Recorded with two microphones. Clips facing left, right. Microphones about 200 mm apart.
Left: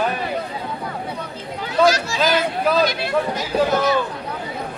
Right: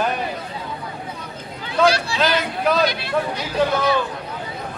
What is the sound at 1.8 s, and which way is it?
Speech, 45° left (ahead or behind).